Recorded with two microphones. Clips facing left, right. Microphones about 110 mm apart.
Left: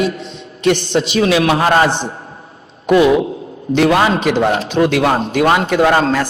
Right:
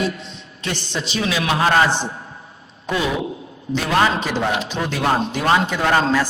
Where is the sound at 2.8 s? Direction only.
65° left (ahead or behind).